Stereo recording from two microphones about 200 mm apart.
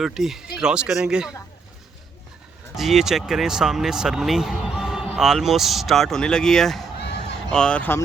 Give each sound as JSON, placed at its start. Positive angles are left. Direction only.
{"t": 0.0, "sound": "speech", "side_deg": 0}
{"t": 2.7, "sound": "speech", "side_deg": 0}
{"t": 7.0, "sound": "a sound", "side_deg": 60}
{"t": 7.5, "sound": "speech", "side_deg": 5}